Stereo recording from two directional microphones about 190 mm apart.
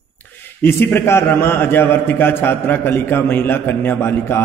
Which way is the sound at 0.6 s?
10° left (ahead or behind).